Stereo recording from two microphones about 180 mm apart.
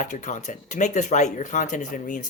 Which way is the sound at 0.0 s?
45° left (ahead or behind).